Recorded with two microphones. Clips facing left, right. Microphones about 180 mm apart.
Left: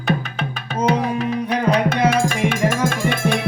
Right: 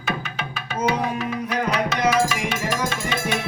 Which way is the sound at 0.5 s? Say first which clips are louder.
Left 4 dB; 40° left (ahead or behind).